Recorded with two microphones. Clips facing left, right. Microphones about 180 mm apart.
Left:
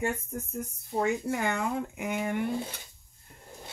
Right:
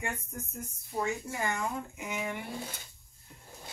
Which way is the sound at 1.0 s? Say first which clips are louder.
Left 5 dB; 65° left (ahead or behind).